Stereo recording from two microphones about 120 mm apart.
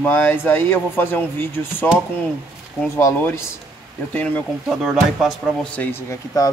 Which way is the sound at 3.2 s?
20° left (ahead or behind).